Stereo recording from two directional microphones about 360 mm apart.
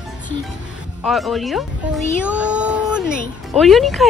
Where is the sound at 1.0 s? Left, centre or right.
Centre.